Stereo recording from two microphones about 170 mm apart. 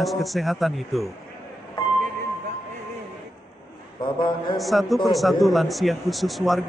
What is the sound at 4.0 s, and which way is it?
Speech, 25° left (ahead or behind).